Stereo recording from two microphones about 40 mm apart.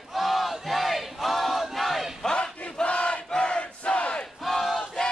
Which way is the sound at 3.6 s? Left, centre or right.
Left.